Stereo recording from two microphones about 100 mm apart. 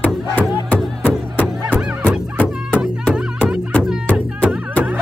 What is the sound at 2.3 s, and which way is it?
Music, 15° left (ahead or behind).